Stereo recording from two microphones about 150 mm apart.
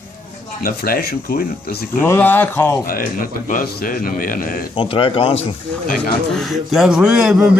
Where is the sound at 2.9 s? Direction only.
70° left (ahead or behind).